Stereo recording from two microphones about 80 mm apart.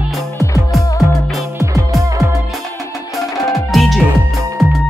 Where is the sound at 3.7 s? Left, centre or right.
Centre.